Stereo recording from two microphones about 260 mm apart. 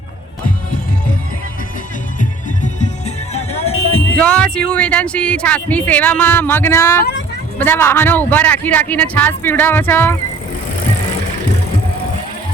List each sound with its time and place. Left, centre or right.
3.3 s music: left
4.2 s speech: centre